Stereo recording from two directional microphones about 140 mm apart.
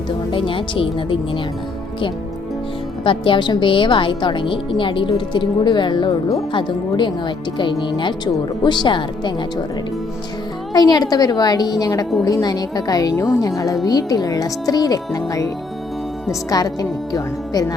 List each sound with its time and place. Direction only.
0.3 s speech: 40° left (ahead or behind)
3.0 s speech: 35° left (ahead or behind)
10.8 s speech: 30° left (ahead or behind)
16.5 s speech: 25° left (ahead or behind)